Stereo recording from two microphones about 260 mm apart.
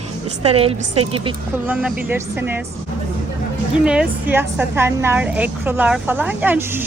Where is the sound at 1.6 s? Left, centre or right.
Centre.